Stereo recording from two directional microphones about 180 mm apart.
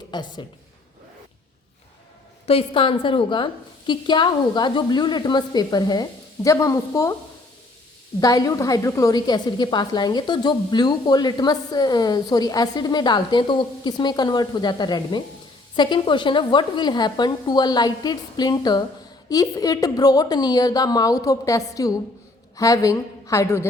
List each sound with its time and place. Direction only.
0.1 s a woman's voice: 25° left (ahead or behind)
2.5 s a woman's voice: 30° left (ahead or behind)
8.2 s a woman's voice: 20° left (ahead or behind)